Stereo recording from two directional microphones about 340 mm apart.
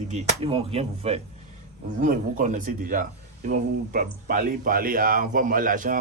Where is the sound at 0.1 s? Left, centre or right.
Centre.